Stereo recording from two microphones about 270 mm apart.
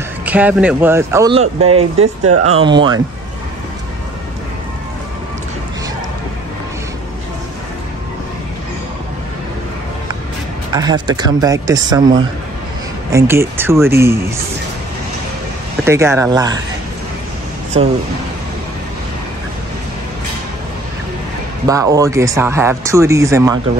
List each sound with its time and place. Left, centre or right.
0.2 s speech: centre
1.3 s speech: right
10.7 s speech: centre
15.8 s speech: centre
17.8 s speech: right
21.6 s speech: centre